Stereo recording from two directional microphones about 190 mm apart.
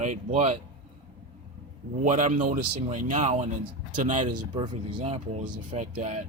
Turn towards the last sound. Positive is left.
turn(degrees=-35)  # may be behind; listen again after turning